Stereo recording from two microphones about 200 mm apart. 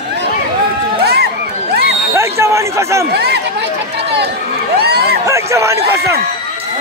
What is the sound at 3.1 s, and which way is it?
Speech, 55° right (ahead or behind).